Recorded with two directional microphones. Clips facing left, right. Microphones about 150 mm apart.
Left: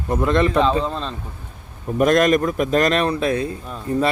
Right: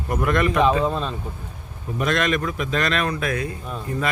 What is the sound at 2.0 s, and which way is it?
Speech, 45° left (ahead or behind).